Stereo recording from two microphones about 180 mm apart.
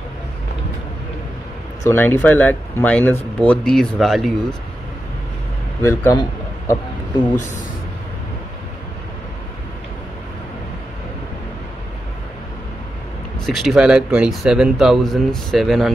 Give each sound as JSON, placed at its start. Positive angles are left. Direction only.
{"t": 1.9, "sound": "speech", "side_deg": 10}
{"t": 5.8, "sound": "speech", "side_deg": 15}
{"t": 13.5, "sound": "speech", "side_deg": 0}